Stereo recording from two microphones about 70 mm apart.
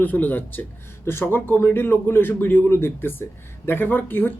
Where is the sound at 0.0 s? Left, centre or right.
Left.